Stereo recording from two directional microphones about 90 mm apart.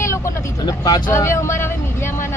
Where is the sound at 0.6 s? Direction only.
45° left (ahead or behind).